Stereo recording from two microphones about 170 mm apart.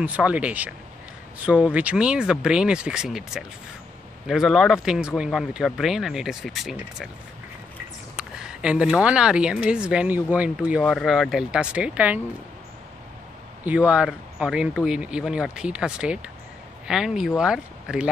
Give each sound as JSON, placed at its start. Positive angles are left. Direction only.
{"t": 0.0, "sound": "speech", "side_deg": -10}
{"t": 8.2, "sound": "speech", "side_deg": -5}
{"t": 13.7, "sound": "speech", "side_deg": -10}